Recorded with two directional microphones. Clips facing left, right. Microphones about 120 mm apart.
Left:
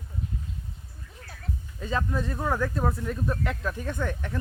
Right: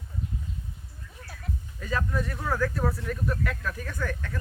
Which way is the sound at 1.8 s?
25° left (ahead or behind).